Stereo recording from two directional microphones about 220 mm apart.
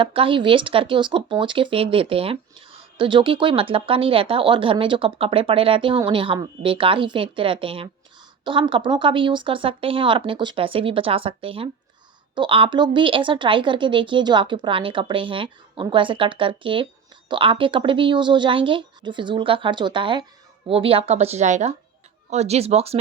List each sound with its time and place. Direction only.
0.0 s speech: 25° right (ahead or behind)